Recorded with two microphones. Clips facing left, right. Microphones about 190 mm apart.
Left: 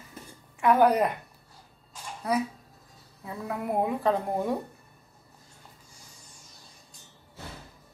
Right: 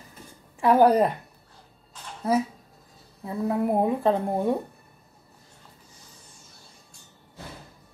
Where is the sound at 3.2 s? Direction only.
30° right (ahead or behind).